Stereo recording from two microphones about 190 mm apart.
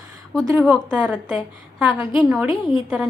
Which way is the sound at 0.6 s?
5° left (ahead or behind).